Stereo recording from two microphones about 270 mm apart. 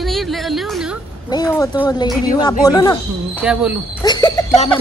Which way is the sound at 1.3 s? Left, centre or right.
Centre.